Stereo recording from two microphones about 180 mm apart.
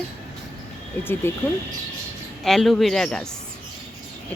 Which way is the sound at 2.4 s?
Centre (ahead or behind).